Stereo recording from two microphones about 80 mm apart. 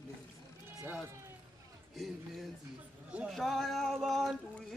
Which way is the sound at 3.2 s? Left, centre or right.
Centre.